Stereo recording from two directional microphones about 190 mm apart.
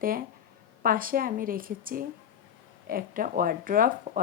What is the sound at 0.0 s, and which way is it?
A woman's voice, 50° right (ahead or behind).